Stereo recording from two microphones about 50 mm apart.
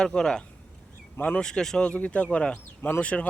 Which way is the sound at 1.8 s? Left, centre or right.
Left.